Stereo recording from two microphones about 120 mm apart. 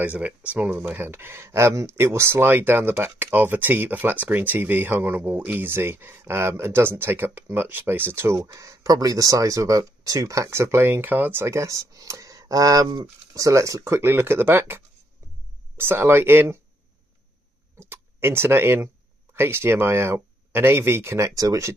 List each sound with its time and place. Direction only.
0.0 s speech: 10° right (ahead or behind)
15.8 s speech: 20° right (ahead or behind)
17.7 s speech: 20° right (ahead or behind)